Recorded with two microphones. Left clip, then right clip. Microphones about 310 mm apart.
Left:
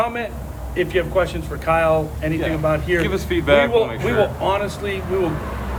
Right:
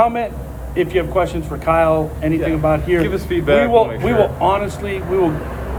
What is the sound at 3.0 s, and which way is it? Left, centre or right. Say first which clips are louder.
Speech: right 2 dB; centre.